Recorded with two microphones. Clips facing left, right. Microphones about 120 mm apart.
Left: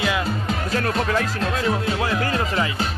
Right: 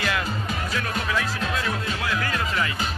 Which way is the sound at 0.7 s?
45° left (ahead or behind).